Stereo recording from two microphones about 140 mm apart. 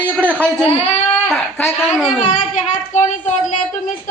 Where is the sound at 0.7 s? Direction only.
50° left (ahead or behind).